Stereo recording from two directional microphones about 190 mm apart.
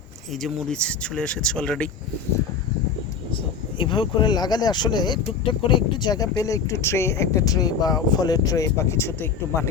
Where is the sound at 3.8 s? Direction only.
25° left (ahead or behind).